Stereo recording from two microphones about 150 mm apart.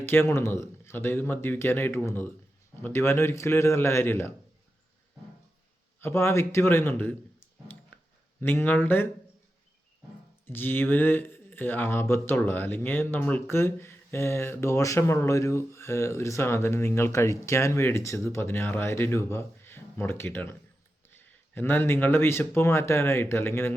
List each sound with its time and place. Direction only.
0.0 s speech: 15° left (ahead or behind)
6.0 s speech: 15° left (ahead or behind)
8.4 s speech: 15° left (ahead or behind)
10.4 s speech: 15° left (ahead or behind)